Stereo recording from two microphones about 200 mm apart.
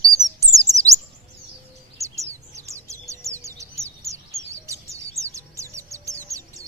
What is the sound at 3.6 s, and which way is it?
Bird, 15° right (ahead or behind).